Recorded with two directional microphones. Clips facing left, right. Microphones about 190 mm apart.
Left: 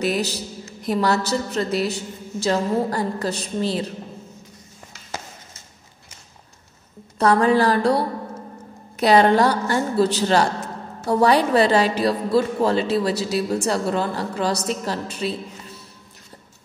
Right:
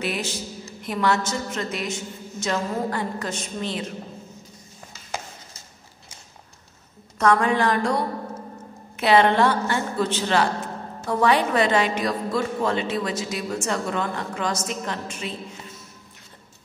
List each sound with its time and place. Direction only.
0.0 s a woman's voice: 40° left (ahead or behind)
7.2 s a woman's voice: 35° left (ahead or behind)